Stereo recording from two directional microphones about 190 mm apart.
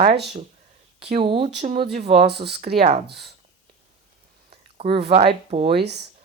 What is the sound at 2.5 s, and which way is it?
Speech, 30° right (ahead or behind).